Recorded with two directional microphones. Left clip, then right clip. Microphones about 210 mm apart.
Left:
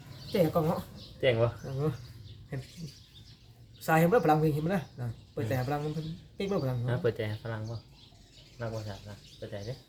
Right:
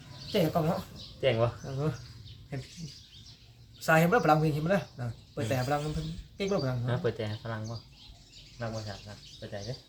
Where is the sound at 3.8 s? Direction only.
5° right (ahead or behind).